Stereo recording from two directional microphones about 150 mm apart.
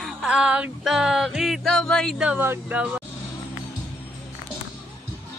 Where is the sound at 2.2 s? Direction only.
10° right (ahead or behind).